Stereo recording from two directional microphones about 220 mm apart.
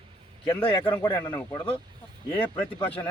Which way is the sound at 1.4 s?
10° left (ahead or behind).